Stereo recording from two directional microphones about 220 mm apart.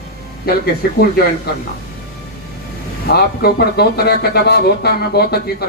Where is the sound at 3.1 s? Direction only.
45° left (ahead or behind).